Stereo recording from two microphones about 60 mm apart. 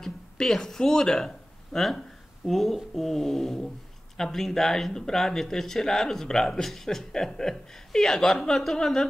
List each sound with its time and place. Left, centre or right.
0.0 s speech: centre